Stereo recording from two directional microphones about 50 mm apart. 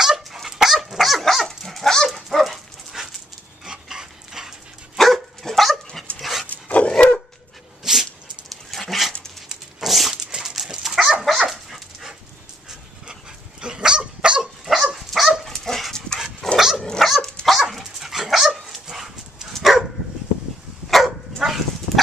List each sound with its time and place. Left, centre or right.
0.0 s dog: centre
4.9 s dog: centre
6.4 s dog: left
7.8 s dog: centre
14.6 s dog: centre
16.5 s dog: centre
20.9 s dog: centre